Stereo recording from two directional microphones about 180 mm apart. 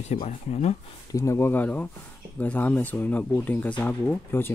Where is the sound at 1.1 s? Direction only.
15° left (ahead or behind).